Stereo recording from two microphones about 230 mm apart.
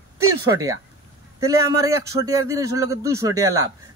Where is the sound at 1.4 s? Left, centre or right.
Centre.